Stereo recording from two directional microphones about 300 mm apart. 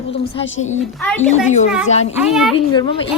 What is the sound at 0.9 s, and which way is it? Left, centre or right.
Speech, centre.